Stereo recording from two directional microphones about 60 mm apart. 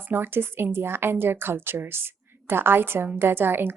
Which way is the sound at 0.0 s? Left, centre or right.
Right.